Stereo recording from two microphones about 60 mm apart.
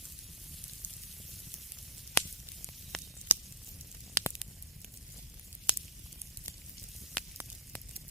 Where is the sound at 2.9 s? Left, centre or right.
Centre.